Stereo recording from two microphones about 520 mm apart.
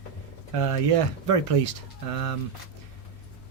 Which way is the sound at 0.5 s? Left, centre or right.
Right.